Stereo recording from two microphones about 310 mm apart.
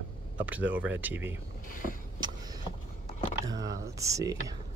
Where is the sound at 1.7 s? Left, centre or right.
Left.